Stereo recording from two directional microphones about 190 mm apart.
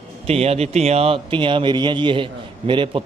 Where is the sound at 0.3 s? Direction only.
30° right (ahead or behind).